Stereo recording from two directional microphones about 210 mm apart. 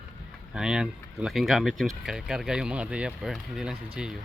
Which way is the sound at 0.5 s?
5° right (ahead or behind).